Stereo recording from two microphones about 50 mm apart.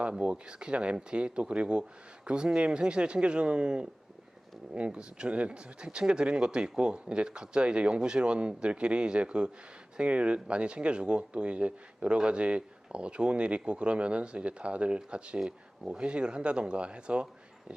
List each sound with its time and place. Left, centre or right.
0.1 s speech: centre